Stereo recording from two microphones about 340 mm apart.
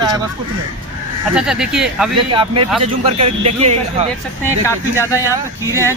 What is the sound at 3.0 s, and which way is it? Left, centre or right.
Speech, centre.